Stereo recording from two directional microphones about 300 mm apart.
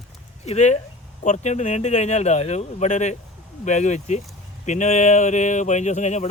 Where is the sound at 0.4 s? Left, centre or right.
Left.